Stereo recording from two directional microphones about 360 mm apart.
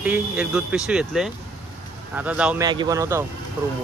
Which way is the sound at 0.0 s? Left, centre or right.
Centre.